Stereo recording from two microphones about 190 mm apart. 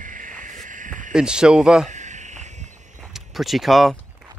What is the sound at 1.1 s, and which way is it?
Speech, 5° right (ahead or behind).